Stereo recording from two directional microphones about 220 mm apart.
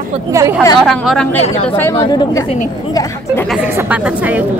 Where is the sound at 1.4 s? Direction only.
30° left (ahead or behind).